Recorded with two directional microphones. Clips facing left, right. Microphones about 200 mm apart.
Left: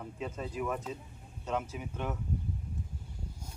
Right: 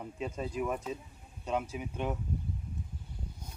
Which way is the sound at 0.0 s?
15° right (ahead or behind).